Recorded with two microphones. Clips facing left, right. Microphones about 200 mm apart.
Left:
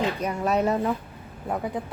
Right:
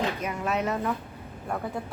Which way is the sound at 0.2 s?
35° left (ahead or behind).